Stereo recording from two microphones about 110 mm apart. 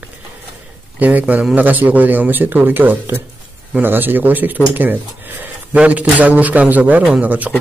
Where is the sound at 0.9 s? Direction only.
15° right (ahead or behind).